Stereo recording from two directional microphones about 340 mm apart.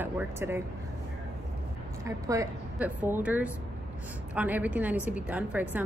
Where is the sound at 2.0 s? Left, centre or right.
Centre.